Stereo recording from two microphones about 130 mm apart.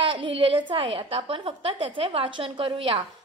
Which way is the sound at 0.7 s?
40° right (ahead or behind).